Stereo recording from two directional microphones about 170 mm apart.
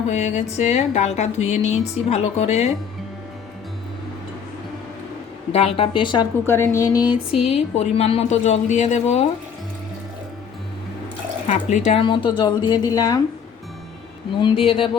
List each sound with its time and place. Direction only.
0.1 s speech: 40° left (ahead or behind)
5.5 s speech: 35° left (ahead or behind)
6.4 s a woman's voice: 15° left (ahead or behind)
7.3 s speech: 35° left (ahead or behind)
11.4 s a woman's voice: 45° left (ahead or behind); by 13.2 s 20° left (ahead or behind)
14.4 s speech: 35° left (ahead or behind)